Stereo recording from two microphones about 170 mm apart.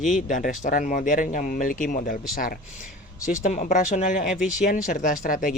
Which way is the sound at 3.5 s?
45° left (ahead or behind).